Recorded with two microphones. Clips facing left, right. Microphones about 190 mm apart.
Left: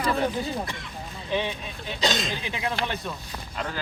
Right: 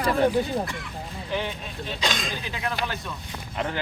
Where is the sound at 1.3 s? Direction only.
15° left (ahead or behind).